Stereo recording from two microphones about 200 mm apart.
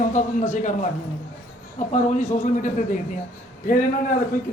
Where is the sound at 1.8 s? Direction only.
35° left (ahead or behind).